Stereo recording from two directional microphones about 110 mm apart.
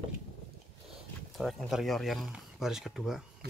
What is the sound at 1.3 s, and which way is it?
Speech, centre (ahead or behind).